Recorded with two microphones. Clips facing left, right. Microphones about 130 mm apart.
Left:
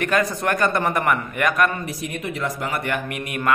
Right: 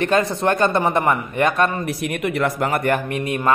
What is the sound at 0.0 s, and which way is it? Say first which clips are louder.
A man's voice: right 3 dB; 25° right (ahead or behind).